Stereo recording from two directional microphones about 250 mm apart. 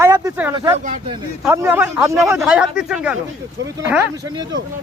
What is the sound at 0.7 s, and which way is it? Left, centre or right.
Speech, right.